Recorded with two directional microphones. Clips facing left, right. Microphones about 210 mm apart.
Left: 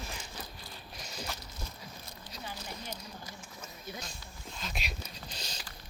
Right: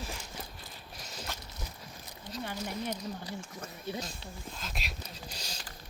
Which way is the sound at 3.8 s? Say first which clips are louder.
Right 7 dB; 30° right (ahead or behind).